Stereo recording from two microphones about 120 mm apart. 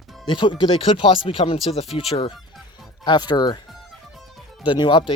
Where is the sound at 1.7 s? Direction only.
60° left (ahead or behind).